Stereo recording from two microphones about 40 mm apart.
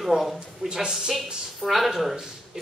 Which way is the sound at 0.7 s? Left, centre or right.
Centre.